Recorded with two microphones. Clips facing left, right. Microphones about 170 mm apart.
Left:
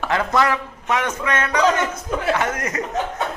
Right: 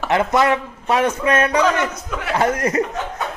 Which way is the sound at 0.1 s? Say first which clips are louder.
Right 3 dB; 20° right (ahead or behind).